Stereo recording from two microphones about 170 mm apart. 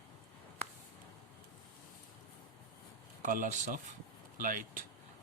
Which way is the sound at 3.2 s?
50° right (ahead or behind).